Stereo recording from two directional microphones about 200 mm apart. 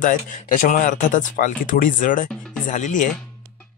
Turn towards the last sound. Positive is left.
turn(degrees=40)  # may be behind; listen again after turning